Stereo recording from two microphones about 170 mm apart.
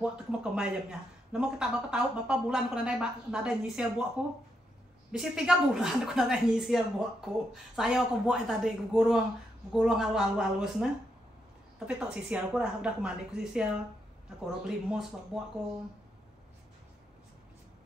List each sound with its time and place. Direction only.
0.0 s a woman's voice: 5° right (ahead or behind)
11.9 s a woman's voice: 5° right (ahead or behind)